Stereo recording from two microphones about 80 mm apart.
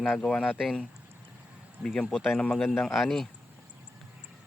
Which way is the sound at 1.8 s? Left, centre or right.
Centre.